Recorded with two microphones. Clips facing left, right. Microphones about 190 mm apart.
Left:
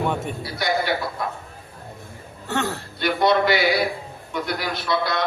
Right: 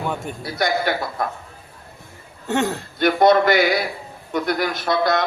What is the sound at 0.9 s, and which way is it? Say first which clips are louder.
Speech: right 2 dB; 50° right (ahead or behind).